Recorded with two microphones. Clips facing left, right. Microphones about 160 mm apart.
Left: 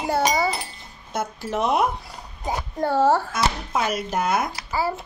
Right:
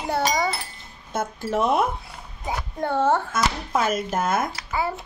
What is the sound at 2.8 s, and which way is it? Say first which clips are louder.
Speech: left 2 dB; 5° left (ahead or behind).